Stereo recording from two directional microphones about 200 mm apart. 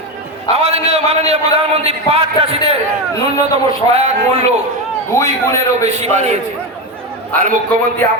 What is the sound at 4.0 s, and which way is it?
Speech, 35° right (ahead or behind).